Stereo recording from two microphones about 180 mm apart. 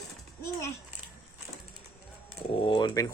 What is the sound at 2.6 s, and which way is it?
Speech, 25° left (ahead or behind).